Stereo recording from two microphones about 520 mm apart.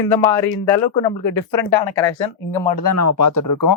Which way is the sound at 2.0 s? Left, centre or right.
Left.